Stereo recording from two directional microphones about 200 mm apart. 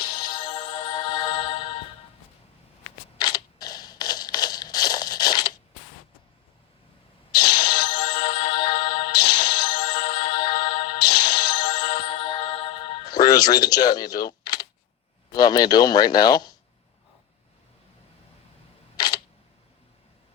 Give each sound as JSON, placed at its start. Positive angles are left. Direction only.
{"t": 0.5, "sound": "music", "side_deg": 25}
{"t": 3.2, "sound": "a sound", "side_deg": 20}
{"t": 7.3, "sound": "music", "side_deg": 50}
{"t": 12.0, "sound": "music", "side_deg": 25}
{"t": 15.3, "sound": "speech", "side_deg": 20}
{"t": 18.9, "sound": "camera", "side_deg": 20}